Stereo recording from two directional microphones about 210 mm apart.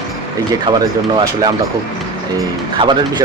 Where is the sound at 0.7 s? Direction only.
25° right (ahead or behind).